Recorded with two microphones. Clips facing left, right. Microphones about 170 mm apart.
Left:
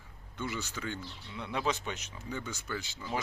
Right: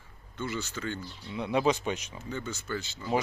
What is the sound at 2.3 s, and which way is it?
Speech, 10° left (ahead or behind).